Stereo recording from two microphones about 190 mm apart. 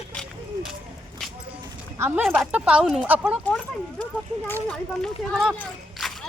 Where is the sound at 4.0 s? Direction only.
10° left (ahead or behind).